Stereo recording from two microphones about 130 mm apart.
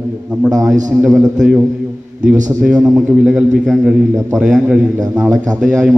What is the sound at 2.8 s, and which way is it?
A man's voice, 5° right (ahead or behind).